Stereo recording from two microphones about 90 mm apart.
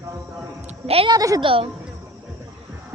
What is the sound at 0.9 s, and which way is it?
Speech, 90° right.